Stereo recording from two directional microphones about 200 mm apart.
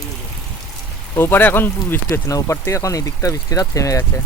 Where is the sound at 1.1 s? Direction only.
10° left (ahead or behind).